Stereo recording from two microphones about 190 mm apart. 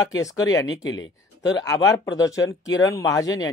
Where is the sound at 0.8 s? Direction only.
75° left (ahead or behind).